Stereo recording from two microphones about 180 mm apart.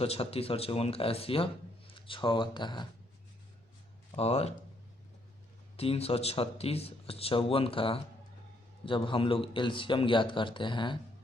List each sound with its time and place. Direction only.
0.0 s speech: 35° left (ahead or behind)
4.1 s speech: 35° left (ahead or behind)
5.7 s a man's voice: 35° left (ahead or behind)